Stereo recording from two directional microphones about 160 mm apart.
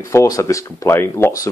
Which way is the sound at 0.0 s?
20° left (ahead or behind).